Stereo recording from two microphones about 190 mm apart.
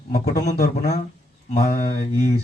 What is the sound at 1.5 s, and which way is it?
Speech, 45° left (ahead or behind).